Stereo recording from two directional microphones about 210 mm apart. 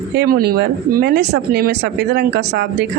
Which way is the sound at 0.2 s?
45° right (ahead or behind).